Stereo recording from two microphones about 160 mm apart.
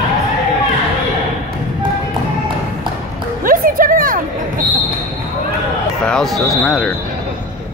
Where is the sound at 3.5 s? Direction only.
60° right (ahead or behind).